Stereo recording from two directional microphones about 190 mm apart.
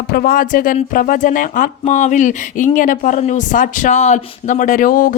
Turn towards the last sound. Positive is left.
turn(degrees=45)  # may be behind; listen again after turning